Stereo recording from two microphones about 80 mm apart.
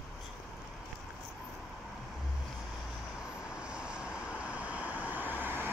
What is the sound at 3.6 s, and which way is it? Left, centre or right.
Vehicle, centre.